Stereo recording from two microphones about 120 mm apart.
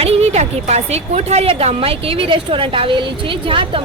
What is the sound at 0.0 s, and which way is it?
A woman's voice, 65° right (ahead or behind).